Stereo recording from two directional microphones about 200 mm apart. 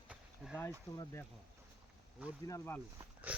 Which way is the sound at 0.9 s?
20° left (ahead or behind).